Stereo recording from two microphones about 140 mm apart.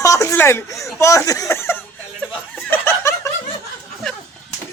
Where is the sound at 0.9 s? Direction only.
20° left (ahead or behind).